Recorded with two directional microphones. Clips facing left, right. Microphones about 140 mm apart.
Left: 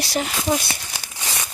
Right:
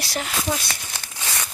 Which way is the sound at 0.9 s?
10° left (ahead or behind).